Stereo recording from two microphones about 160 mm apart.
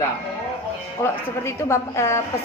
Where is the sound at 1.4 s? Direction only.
15° left (ahead or behind).